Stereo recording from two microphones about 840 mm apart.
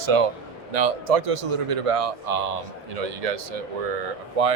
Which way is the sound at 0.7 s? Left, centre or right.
Right.